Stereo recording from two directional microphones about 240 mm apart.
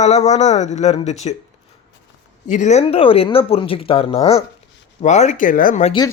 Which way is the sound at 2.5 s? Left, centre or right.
Left.